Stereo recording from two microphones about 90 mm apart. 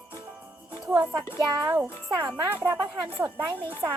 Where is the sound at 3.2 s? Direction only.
25° right (ahead or behind).